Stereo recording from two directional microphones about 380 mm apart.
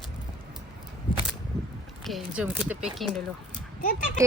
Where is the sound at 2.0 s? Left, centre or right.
Centre.